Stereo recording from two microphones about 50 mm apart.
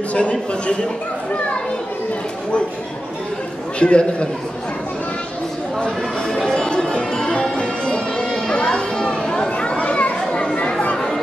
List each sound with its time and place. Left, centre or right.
0.1 s a man's voice: left
3.8 s a man's voice: left
5.9 s music: centre
9.5 s children playing: left